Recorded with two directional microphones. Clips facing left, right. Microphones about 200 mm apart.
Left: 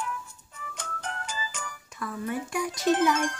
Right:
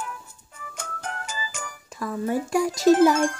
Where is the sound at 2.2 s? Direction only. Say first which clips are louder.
Right 8 dB; 30° right (ahead or behind).